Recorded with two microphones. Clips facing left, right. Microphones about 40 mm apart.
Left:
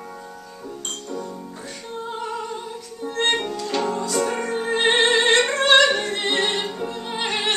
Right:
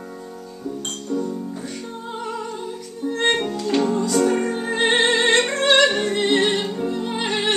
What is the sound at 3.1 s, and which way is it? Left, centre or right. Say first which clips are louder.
Music: right 2 dB; centre.